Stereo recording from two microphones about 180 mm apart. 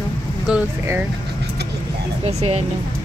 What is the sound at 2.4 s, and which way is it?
Speech, 35° right (ahead or behind).